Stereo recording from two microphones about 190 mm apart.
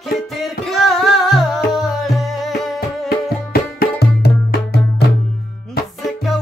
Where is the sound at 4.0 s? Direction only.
55° left (ahead or behind).